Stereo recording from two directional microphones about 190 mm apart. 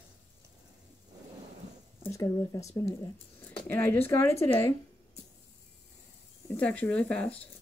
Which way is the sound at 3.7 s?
10° left (ahead or behind).